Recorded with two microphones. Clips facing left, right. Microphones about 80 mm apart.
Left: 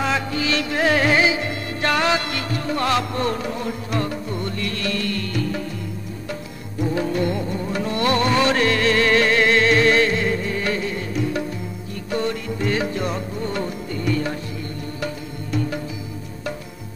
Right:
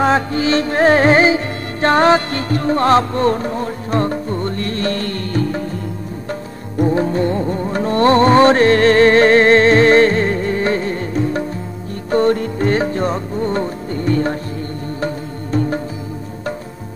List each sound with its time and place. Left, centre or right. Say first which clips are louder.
0.0 s music: right 7 dB; right
6.8 s music: right 6 dB; right